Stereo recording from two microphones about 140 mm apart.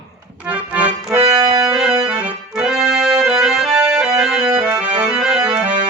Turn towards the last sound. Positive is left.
turn(degrees=-5)  # may be behind; listen again after turning